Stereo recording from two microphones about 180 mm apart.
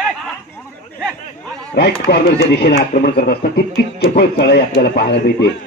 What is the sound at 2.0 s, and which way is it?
Speech, 65° left (ahead or behind).